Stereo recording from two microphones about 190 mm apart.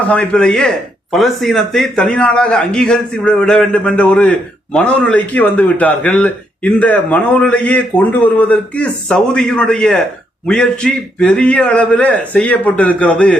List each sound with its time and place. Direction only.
0.0 s a man's voice: 5° left (ahead or behind)